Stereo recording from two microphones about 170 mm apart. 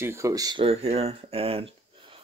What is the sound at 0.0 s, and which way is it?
Speech, 15° right (ahead or behind).